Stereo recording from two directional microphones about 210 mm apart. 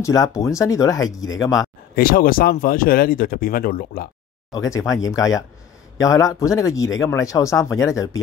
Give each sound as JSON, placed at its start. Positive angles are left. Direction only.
{"t": 0.0, "sound": "speech", "side_deg": 15}
{"t": 2.0, "sound": "speech", "side_deg": 45}
{"t": 4.5, "sound": "speech", "side_deg": 15}